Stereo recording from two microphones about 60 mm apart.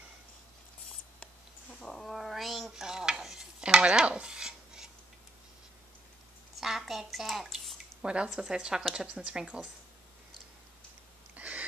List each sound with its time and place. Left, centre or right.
1.8 s cat: centre
2.0 s dishes: centre
6.6 s a sound: centre
8.0 s speech: centre
11.3 s owl: right